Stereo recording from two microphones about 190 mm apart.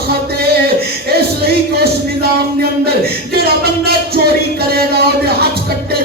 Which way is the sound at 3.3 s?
55° right (ahead or behind).